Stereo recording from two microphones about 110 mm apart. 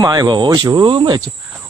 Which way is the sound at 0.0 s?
35° right (ahead or behind).